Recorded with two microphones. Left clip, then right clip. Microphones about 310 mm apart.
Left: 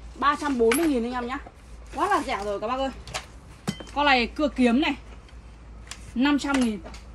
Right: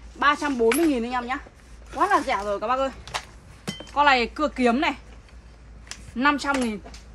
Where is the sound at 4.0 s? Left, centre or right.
Centre.